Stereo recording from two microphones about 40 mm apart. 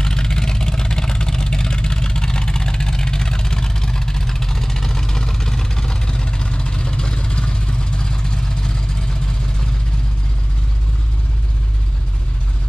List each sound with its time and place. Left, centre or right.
0.0 s vehicle: centre